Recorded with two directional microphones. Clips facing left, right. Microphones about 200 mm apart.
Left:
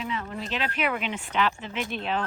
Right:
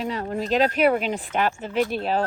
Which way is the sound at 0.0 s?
40° right (ahead or behind).